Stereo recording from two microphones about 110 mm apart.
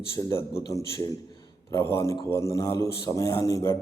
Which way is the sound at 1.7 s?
25° left (ahead or behind).